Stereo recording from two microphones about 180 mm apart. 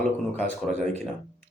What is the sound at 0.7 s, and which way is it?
Speech, 40° right (ahead or behind).